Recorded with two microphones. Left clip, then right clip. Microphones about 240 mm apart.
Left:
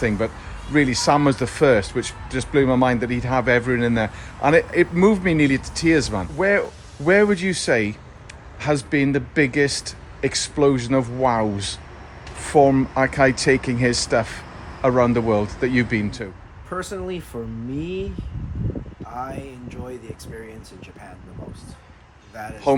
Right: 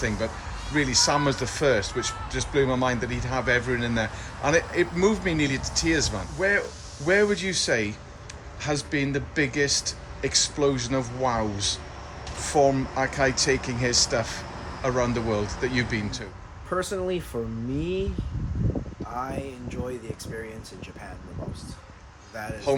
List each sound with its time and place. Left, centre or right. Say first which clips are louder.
0.8 s speech: left 5 dB; left
16.6 s speech: right 1 dB; centre
19.1 s speech: left 1 dB; centre